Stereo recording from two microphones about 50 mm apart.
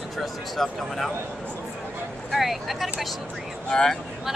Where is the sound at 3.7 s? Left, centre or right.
Centre.